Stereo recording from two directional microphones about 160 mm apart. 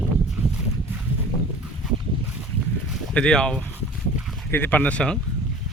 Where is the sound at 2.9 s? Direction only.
5° left (ahead or behind).